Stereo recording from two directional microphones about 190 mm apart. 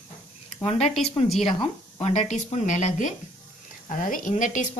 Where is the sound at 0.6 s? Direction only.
30° left (ahead or behind).